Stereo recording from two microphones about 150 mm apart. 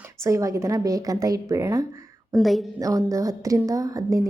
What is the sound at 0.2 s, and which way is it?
Speech, 20° right (ahead or behind).